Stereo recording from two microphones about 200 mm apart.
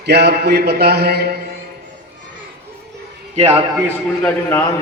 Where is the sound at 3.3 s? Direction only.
30° right (ahead or behind).